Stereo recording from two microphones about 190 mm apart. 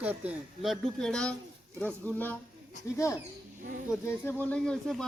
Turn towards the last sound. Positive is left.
turn(degrees=0)  # may be behind; listen again after turning